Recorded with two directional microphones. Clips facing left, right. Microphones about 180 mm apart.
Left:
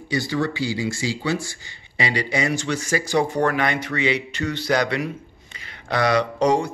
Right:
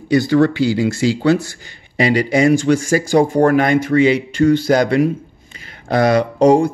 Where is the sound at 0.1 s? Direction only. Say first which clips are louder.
Right 11 dB; 55° right (ahead or behind).